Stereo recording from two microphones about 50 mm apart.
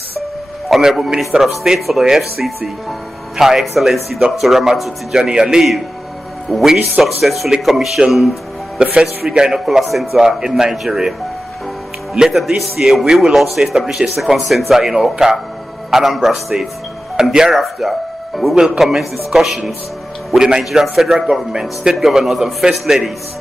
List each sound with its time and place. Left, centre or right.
0.7 s a man's voice: centre
8.8 s a man's voice: right
9.7 s speech: centre
10.2 s a man's voice: centre